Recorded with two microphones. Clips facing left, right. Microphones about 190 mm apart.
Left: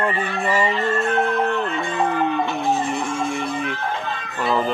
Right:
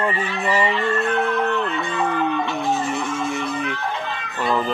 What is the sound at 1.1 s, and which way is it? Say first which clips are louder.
Music: left 1 dB; 40° left (ahead or behind).